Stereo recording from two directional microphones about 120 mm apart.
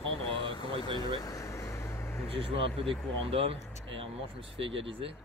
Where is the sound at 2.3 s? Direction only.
50° right (ahead or behind).